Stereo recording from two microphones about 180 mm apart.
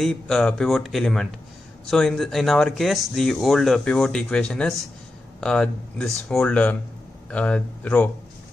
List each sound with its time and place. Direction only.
0.0 s speech: 5° left (ahead or behind)